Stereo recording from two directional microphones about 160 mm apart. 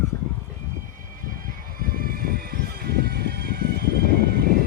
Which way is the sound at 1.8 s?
65° right (ahead or behind).